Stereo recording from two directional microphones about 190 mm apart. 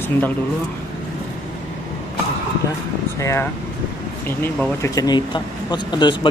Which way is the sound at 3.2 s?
15° left (ahead or behind).